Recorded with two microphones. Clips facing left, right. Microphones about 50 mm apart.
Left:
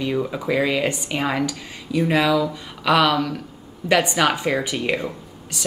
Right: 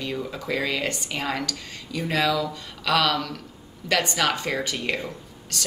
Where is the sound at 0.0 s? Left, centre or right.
Centre.